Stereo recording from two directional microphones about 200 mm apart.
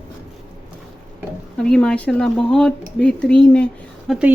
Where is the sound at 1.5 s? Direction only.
5° left (ahead or behind).